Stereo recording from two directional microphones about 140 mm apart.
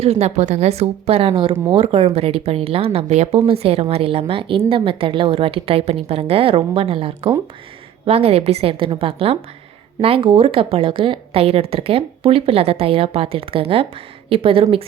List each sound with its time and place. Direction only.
0.0 s a woman's voice: 50° right (ahead or behind)